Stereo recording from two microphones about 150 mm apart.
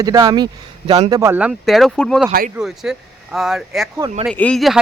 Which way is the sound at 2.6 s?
Centre (ahead or behind).